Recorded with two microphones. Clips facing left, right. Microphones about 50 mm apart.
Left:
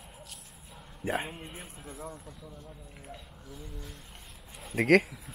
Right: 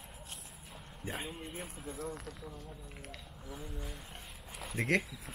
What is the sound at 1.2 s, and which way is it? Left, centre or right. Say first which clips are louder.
Speech: left 2 dB; left.